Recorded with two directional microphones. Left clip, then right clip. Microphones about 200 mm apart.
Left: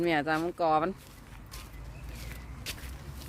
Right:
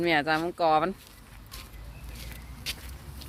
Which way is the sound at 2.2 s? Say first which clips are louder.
Right 2 dB; 40° left (ahead or behind).